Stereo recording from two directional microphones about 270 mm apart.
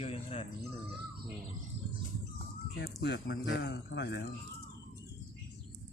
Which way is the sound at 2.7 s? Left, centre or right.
Left.